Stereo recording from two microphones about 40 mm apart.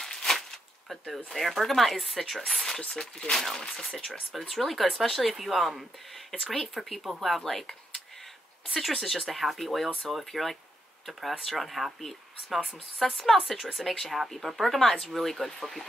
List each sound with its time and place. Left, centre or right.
0.0 s a sound: centre
0.8 s speech: centre
3.0 s speech: centre